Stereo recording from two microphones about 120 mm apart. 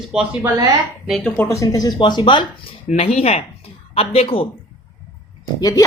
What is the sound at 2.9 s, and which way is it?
Speech, 60° left (ahead or behind).